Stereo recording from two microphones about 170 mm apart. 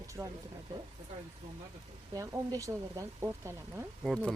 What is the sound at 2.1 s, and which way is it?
Speech, 20° right (ahead or behind).